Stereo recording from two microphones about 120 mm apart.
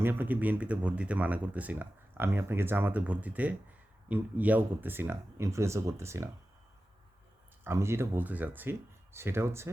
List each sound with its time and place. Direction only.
0.0 s speech: 15° right (ahead or behind)
7.6 s speech: 20° right (ahead or behind)